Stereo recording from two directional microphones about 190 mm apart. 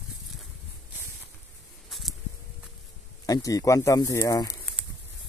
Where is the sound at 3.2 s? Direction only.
20° left (ahead or behind).